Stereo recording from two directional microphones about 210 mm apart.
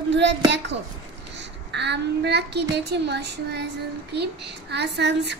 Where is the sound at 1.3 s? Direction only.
55° right (ahead or behind).